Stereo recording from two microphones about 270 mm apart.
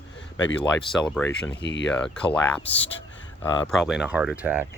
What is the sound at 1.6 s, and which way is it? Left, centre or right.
Speech, left.